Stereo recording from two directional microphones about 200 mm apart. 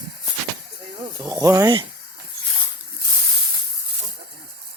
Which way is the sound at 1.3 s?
15° right (ahead or behind).